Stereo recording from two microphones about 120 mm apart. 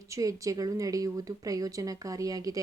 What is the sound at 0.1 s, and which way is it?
Speech, 30° right (ahead or behind).